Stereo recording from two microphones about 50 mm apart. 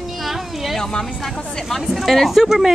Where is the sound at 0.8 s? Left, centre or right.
Centre.